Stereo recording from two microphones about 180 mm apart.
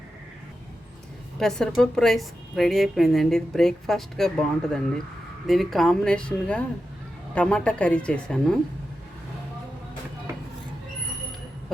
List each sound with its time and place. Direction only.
1.4 s a woman's voice: 5° left (ahead or behind)